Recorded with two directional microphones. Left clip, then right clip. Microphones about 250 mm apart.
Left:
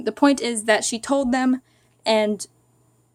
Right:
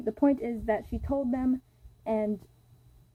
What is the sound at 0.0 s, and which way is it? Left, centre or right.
A woman's voice, left.